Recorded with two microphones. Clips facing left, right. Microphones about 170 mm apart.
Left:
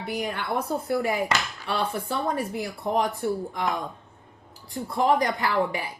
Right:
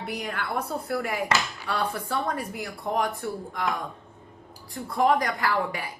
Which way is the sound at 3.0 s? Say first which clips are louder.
Left 3 dB; centre (ahead or behind).